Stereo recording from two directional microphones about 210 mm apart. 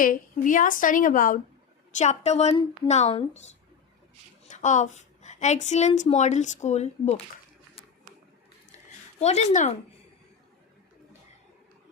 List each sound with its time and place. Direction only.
0.0 s speech: 40° left (ahead or behind)
4.4 s a woman's voice: 35° left (ahead or behind)
9.2 s speech: 30° left (ahead or behind)